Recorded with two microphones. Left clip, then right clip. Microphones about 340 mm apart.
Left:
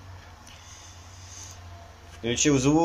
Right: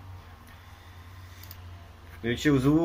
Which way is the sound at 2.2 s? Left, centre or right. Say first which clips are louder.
Left 4 dB; left.